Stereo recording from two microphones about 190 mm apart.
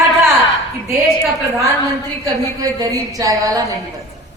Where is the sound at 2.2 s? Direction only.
20° right (ahead or behind).